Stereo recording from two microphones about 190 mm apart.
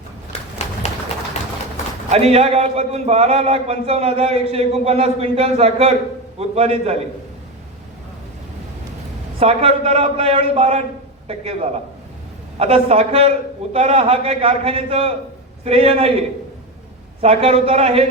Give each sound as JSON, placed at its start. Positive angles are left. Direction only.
{"t": 0.8, "sound": "a sound", "side_deg": 35}
{"t": 2.0, "sound": "a man's voice", "side_deg": -35}
{"t": 9.4, "sound": "a man's voice", "side_deg": -30}
{"t": 17.2, "sound": "a man's voice", "side_deg": -30}